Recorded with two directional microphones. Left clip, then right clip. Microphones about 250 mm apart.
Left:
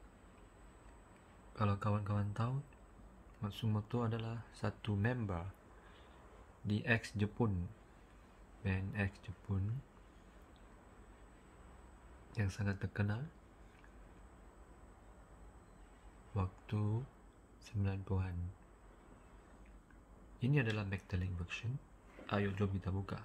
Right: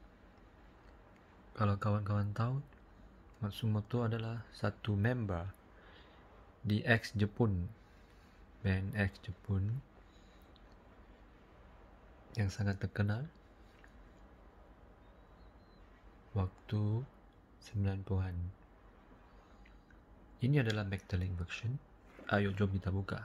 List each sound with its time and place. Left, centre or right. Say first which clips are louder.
1.5 s speech: right 2 dB; centre
6.7 s speech: right 4 dB; centre
8.6 s speech: right 4 dB; centre
12.4 s speech: right 2 dB; centre
16.3 s speech: right 2 dB; centre
20.3 s speech: right 3 dB; centre